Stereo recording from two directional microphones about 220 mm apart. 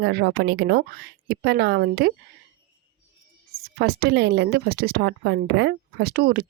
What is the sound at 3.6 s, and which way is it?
Speech, 45° right (ahead or behind).